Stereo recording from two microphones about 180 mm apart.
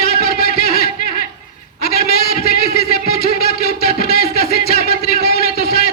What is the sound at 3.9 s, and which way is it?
Music, 55° left (ahead or behind).